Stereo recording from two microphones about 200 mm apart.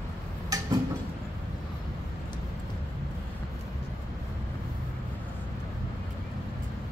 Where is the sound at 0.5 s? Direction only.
20° right (ahead or behind).